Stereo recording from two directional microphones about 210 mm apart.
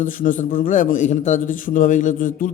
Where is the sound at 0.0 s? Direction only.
40° left (ahead or behind).